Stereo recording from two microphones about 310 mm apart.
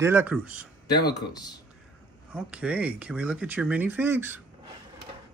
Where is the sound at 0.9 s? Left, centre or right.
Centre.